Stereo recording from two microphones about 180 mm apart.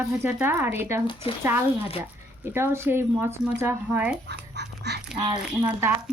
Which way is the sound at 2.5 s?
15° right (ahead or behind).